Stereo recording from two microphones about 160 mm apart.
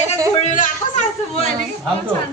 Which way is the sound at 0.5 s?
50° left (ahead or behind).